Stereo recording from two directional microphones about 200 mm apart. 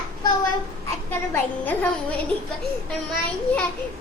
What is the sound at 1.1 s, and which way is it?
Speech, 10° left (ahead or behind).